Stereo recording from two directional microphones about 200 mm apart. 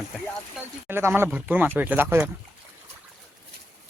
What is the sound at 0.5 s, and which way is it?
Speech, 10° right (ahead or behind).